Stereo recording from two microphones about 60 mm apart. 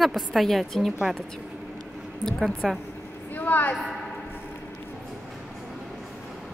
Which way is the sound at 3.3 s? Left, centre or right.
Left.